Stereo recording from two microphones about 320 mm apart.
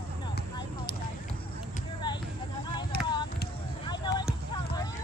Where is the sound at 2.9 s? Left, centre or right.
Left.